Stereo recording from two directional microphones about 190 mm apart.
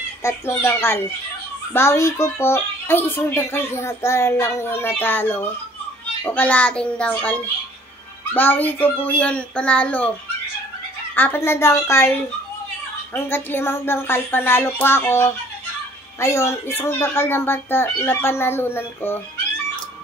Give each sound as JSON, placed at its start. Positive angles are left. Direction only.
{"t": 0.2, "sound": "a child's voice", "side_deg": 15}
{"t": 11.1, "sound": "a child's voice", "side_deg": 10}